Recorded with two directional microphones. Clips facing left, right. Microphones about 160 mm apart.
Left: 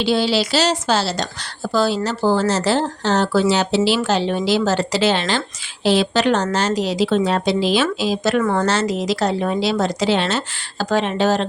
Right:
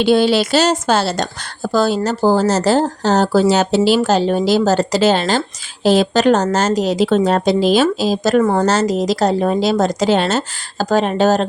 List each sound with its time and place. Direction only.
0.0 s a woman's voice: 55° right (ahead or behind)